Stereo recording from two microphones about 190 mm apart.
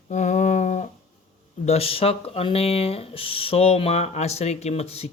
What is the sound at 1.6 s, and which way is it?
Speech, 30° left (ahead or behind).